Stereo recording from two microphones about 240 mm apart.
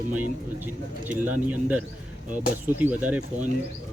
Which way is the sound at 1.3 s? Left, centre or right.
Centre.